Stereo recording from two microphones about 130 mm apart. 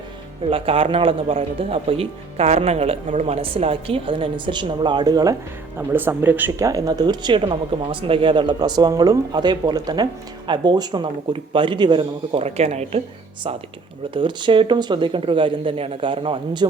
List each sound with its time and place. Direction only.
0.5 s speech: 45° right (ahead or behind); by 5.4 s 30° right (ahead or behind)
5.9 s speech: 15° right (ahead or behind)
6.7 s speech: 30° right (ahead or behind)
12.4 s speech: 55° right (ahead or behind)
14.1 s speech: 40° right (ahead or behind)